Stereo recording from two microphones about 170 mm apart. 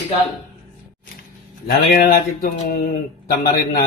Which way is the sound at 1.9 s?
60° left (ahead or behind).